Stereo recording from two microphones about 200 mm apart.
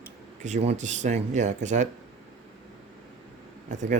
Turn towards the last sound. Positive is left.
turn(degrees=-40)  # may be behind; listen again after turning